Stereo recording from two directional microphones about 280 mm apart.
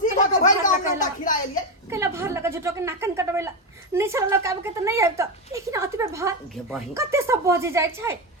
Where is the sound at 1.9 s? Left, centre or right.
Centre.